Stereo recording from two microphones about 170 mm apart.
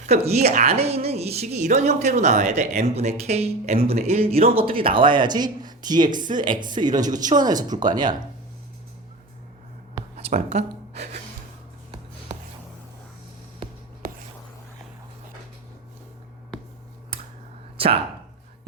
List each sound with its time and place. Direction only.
0.0 s a woman's voice: 40° right (ahead or behind)
10.3 s speech: 40° right (ahead or behind)
13.6 s writing: 30° right (ahead or behind)
17.7 s speech: 35° right (ahead or behind)